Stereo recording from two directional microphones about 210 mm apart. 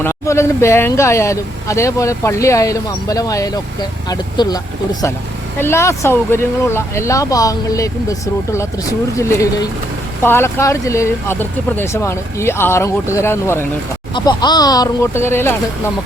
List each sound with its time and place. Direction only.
0.0 s speech: 15° left (ahead or behind)